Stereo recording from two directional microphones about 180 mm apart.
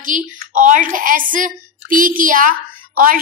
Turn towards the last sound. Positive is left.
turn(degrees=-50)  # may be behind; listen again after turning